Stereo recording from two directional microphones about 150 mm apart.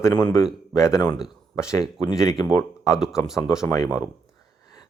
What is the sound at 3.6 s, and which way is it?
Speech, 20° left (ahead or behind).